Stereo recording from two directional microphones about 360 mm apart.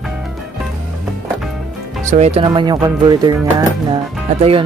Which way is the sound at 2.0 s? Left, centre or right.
Centre.